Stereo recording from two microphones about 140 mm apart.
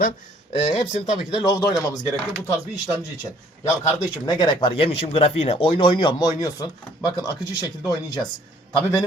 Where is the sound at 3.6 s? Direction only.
30° left (ahead or behind).